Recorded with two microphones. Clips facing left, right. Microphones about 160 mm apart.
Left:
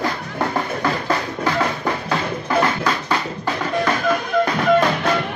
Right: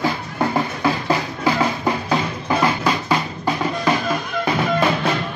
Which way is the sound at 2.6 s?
10° right (ahead or behind).